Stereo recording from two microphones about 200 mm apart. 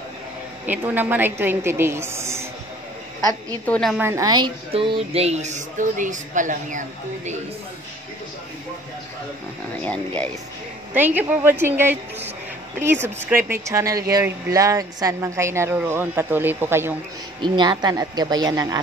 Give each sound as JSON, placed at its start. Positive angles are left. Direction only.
{"t": 0.7, "sound": "speech", "side_deg": -10}
{"t": 3.6, "sound": "a woman's voice", "side_deg": 5}
{"t": 4.0, "sound": "speech", "side_deg": -15}
{"t": 9.8, "sound": "speech", "side_deg": 5}
{"t": 10.9, "sound": "speech", "side_deg": -10}
{"t": 13.5, "sound": "speech", "side_deg": -15}
{"t": 17.4, "sound": "a woman's voice", "side_deg": -20}